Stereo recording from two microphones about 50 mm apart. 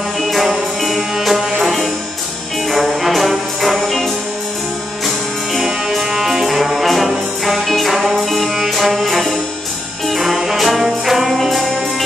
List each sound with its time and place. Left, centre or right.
0.2 s music: centre
3.0 s brass instrument: centre
5.0 s music: centre